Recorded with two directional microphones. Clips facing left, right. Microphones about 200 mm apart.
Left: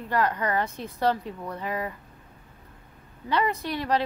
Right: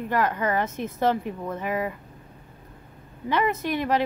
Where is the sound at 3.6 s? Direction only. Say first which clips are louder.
Right 2 dB; 15° right (ahead or behind).